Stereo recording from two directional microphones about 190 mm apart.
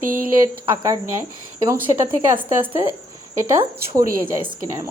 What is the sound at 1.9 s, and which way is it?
Speech, 25° right (ahead or behind).